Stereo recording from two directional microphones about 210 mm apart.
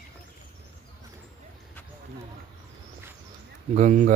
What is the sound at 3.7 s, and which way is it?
Speech, 35° right (ahead or behind).